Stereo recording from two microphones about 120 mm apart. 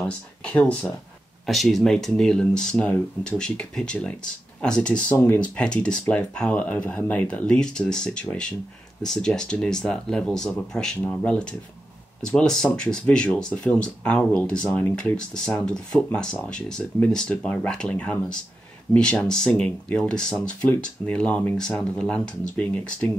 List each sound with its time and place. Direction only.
0.4 s speech: 10° left (ahead or behind)
5.6 s speech: 5° left (ahead or behind)